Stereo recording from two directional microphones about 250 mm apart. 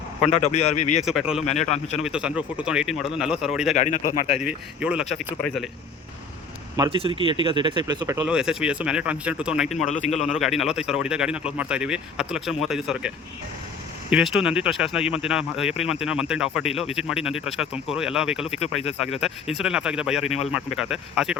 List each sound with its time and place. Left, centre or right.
0.3 s speech: left
1.0 s speech: centre
1.5 s speech: left
2.0 s speech: centre
3.8 s speech: left
4.4 s speech: centre
6.7 s speech: centre